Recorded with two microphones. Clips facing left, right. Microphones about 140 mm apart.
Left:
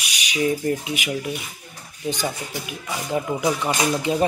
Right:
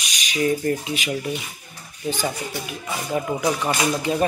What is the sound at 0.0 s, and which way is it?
Speech, 10° left (ahead or behind).